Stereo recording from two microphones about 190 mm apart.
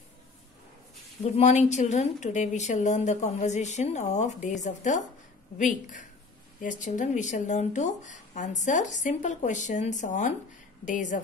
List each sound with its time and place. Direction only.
1.3 s a woman's voice: 35° left (ahead or behind)